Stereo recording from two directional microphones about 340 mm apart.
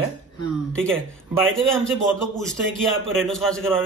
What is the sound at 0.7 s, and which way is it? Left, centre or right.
A man's voice, centre.